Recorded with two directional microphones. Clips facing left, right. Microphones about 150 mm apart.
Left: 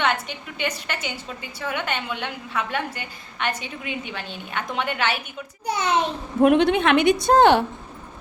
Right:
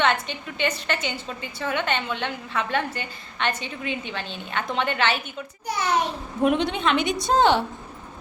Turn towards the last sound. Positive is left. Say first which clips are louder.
# left 4 dB
turn(degrees=55)  # may be behind; listen again after turning